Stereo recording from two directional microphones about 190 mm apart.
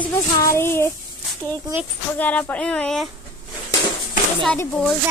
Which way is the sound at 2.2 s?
5° left (ahead or behind).